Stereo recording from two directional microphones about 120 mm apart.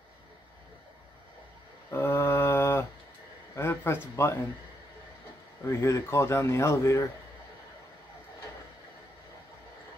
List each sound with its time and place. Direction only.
1.9 s mantra: 20° left (ahead or behind)
3.5 s a sound: 20° left (ahead or behind)
5.7 s speech: 20° left (ahead or behind)